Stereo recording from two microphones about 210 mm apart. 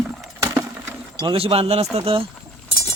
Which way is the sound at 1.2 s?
25° right (ahead or behind).